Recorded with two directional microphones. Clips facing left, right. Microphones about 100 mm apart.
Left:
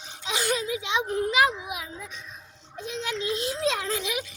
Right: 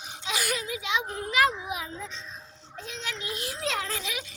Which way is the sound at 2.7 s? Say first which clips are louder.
Left 6 dB; 20° left (ahead or behind).